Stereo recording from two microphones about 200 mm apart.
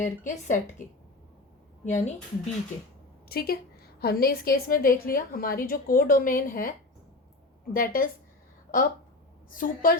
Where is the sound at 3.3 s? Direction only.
50° left (ahead or behind).